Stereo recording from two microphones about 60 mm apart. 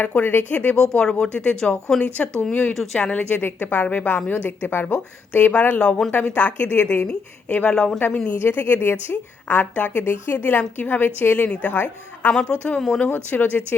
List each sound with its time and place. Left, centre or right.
0.0 s a woman's voice: left
0.8 s a woman's voice: centre
2.7 s speech: centre
3.1 s a woman's voice: centre
3.3 s a woman's voice: left
10.3 s a woman's voice: left
12.3 s speech: centre
13.1 s a woman's voice: left